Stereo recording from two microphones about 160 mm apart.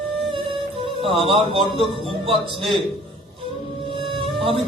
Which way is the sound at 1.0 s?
35° right (ahead or behind).